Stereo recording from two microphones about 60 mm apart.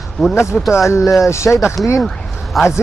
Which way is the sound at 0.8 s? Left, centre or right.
Left.